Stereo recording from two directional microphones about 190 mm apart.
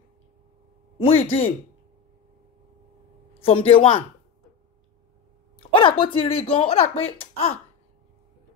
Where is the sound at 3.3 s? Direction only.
30° left (ahead or behind).